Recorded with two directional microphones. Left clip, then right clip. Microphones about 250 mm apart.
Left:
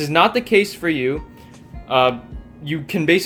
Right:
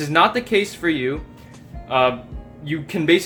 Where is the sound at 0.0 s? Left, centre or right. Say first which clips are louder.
Left 1 dB; centre.